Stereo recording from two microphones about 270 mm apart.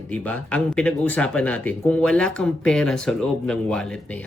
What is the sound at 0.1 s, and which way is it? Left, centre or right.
Speech, centre.